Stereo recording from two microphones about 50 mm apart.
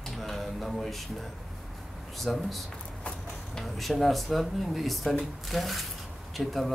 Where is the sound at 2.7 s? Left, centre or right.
Left.